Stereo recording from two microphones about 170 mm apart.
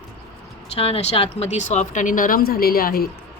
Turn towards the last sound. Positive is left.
turn(degrees=60)  # may be behind; listen again after turning